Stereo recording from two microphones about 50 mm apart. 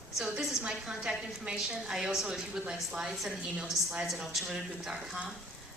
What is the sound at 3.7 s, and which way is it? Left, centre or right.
Speech, left.